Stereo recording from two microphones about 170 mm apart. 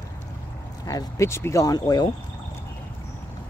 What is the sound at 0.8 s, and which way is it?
Speech, 20° left (ahead or behind).